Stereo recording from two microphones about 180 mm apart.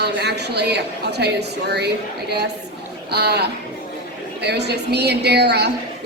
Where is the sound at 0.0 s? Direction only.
65° right (ahead or behind).